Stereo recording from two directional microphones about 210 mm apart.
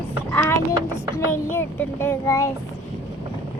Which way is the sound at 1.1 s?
10° left (ahead or behind).